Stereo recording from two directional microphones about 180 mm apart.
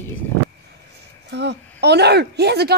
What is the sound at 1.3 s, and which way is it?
A woman's voice, 70° right (ahead or behind).